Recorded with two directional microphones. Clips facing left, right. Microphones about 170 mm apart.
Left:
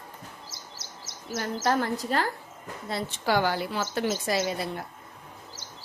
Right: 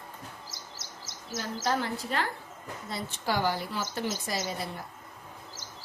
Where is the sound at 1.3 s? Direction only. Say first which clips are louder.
Left 4 dB; 60° left (ahead or behind).